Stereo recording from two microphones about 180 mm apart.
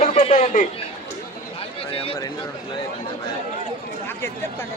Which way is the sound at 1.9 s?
30° left (ahead or behind).